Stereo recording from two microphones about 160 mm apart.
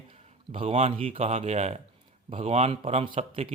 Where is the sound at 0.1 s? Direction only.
35° right (ahead or behind).